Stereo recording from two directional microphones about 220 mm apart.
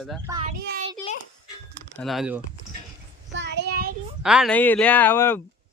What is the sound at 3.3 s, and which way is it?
Child singing, 50° right (ahead or behind).